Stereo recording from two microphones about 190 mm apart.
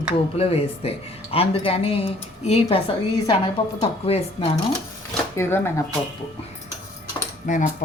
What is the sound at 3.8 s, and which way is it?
Speech, 30° left (ahead or behind).